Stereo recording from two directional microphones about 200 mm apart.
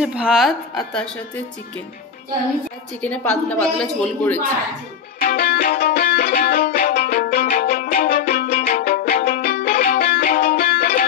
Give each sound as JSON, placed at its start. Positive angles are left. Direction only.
{"t": 0.0, "sound": "a woman's voice", "side_deg": -5}
{"t": 3.0, "sound": "a woman's voice", "side_deg": 5}
{"t": 5.2, "sound": "music", "side_deg": 50}